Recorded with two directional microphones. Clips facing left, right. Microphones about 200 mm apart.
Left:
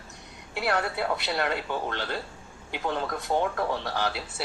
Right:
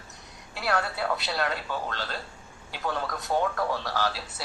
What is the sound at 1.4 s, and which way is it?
A man's voice, 15° left (ahead or behind).